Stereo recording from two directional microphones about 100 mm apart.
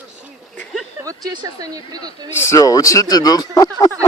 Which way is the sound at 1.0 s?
35° right (ahead or behind).